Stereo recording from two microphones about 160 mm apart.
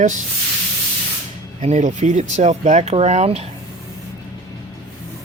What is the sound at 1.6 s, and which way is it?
Speech, 50° right (ahead or behind).